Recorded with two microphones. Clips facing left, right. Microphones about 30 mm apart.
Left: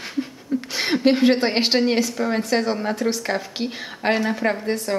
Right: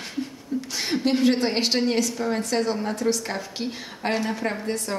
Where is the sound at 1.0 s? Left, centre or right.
Left.